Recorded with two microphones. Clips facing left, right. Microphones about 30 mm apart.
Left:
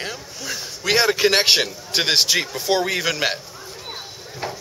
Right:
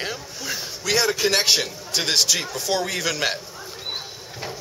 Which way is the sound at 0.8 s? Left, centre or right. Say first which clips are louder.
Left 4 dB; left.